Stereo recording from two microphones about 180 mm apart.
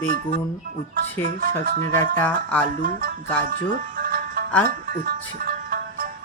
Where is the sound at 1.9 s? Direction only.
10° left (ahead or behind).